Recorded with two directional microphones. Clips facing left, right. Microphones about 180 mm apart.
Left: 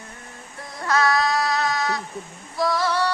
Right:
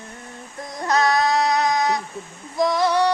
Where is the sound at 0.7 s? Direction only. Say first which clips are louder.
Right 2 dB; 20° right (ahead or behind).